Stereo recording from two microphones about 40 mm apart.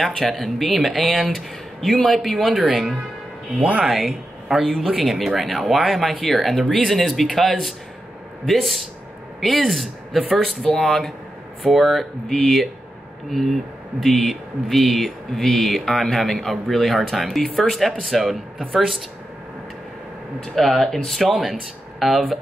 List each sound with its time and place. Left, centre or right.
0.0 s speech: centre
2.6 s speech: centre
3.5 s speech: right
3.8 s speech: centre
4.5 s a man's voice: centre
4.9 s speech: centre
8.5 s speech: centre
20.5 s speech: centre